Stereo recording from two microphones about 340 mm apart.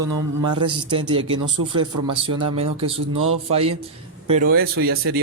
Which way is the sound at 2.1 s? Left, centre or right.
Centre.